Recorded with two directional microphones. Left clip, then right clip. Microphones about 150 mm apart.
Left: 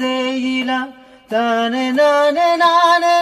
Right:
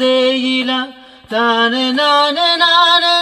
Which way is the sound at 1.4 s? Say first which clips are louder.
Right 4 dB; 30° left (ahead or behind).